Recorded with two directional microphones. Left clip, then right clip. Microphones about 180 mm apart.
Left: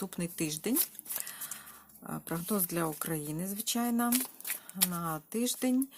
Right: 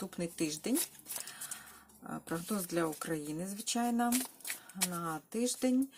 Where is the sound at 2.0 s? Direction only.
45° left (ahead or behind).